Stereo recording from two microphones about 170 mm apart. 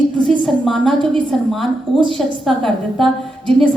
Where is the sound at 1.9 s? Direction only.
30° right (ahead or behind).